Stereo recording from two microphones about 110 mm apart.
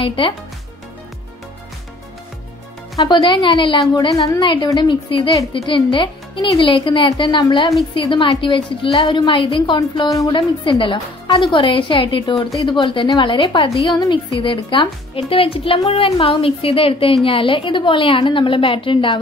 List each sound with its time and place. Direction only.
0.0 s a woman's voice: 55° left (ahead or behind)
3.0 s a woman's voice: 45° left (ahead or behind)